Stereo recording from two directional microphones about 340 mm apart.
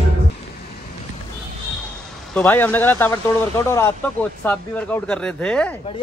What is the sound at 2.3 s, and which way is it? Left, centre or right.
Speech, centre.